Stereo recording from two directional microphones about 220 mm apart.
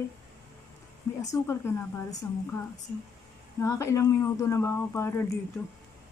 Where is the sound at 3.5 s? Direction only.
15° left (ahead or behind).